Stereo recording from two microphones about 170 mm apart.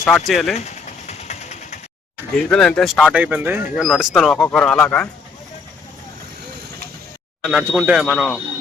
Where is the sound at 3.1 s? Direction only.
10° right (ahead or behind).